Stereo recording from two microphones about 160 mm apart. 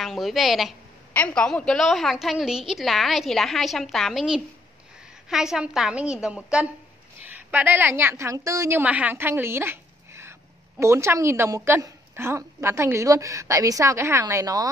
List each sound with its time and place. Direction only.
0.0 s a woman's voice: centre (ahead or behind); by 14.7 s 20° right (ahead or behind)